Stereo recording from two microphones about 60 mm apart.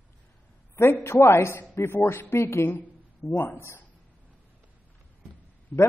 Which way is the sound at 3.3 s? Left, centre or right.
Left.